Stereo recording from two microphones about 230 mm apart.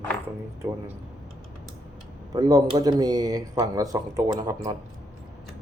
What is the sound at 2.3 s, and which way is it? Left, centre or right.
Speech, centre.